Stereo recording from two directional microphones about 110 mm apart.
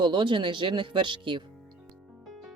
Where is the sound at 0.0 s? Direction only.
45° right (ahead or behind).